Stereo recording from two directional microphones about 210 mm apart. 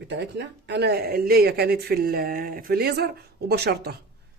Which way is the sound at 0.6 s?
55° right (ahead or behind).